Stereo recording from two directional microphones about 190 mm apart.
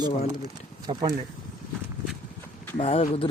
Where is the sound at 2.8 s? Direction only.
30° left (ahead or behind).